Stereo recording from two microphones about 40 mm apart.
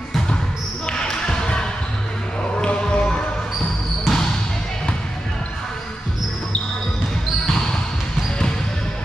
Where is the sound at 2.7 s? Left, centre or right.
Left.